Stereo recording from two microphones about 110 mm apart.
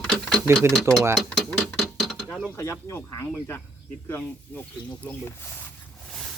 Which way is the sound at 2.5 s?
25° left (ahead or behind).